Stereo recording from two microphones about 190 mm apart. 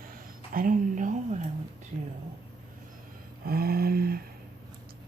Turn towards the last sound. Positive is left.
turn(degrees=-55)  # may be behind; listen again after turning